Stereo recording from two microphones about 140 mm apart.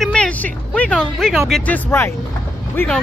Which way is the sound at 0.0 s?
5° left (ahead or behind).